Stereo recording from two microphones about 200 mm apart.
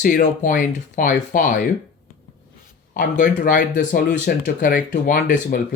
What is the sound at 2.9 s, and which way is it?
Speech, 40° left (ahead or behind).